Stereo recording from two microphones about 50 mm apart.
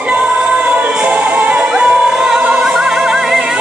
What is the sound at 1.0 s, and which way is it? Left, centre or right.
Music, right.